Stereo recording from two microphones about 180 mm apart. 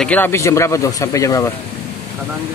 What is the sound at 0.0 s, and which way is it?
Speech, 10° left (ahead or behind).